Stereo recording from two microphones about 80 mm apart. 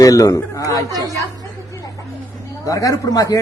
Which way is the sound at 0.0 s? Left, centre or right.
Left.